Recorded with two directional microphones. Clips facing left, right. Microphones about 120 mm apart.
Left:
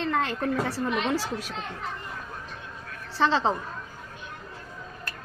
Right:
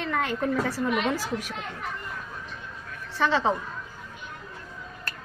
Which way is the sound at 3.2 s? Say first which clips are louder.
Even; 30° left (ahead or behind).